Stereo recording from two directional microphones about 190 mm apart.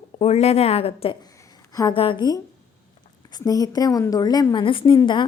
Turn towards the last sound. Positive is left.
turn(degrees=25)  # may be behind; listen again after turning